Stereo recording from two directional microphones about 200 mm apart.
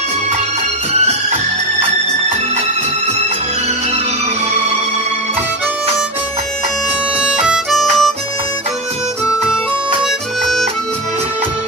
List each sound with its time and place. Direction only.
0.9 s music: 35° right (ahead or behind)
7.3 s music: 5° right (ahead or behind)